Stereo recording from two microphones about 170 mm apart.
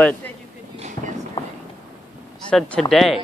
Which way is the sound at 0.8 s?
45° right (ahead or behind).